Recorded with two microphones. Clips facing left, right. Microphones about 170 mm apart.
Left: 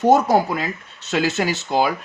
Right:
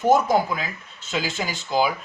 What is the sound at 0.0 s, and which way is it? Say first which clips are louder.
Speech: left 3 dB; 70° left (ahead or behind).